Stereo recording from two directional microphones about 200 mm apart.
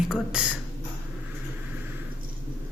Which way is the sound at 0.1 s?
5° right (ahead or behind).